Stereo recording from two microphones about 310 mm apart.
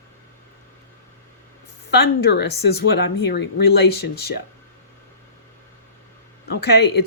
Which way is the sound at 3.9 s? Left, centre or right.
Left.